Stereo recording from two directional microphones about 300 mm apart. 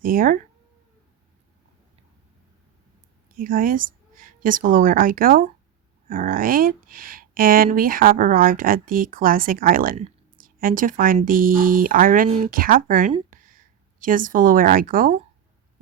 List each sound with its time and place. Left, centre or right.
0.0 s speech: right
3.3 s a woman's voice: right